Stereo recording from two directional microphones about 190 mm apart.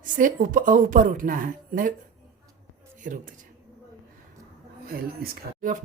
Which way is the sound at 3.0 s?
45° right (ahead or behind).